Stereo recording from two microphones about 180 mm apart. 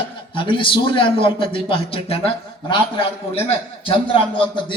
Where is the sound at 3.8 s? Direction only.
30° left (ahead or behind).